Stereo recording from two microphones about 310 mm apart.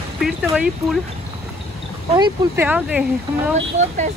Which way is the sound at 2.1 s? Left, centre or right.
Centre.